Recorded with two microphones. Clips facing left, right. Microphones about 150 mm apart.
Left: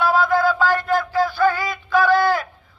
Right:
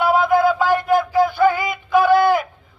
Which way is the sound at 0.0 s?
20° right (ahead or behind).